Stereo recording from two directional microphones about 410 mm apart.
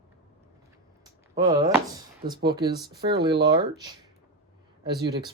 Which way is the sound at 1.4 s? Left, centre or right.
Centre.